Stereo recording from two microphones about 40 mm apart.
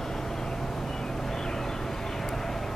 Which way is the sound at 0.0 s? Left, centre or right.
Centre.